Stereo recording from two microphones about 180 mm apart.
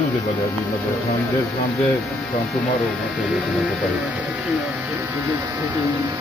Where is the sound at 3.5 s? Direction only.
Centre (ahead or behind).